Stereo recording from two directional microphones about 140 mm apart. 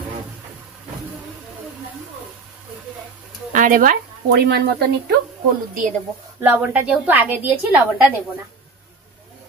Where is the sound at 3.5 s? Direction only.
70° right (ahead or behind).